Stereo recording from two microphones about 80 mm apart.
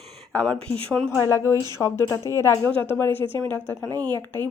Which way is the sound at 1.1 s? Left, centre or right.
Left.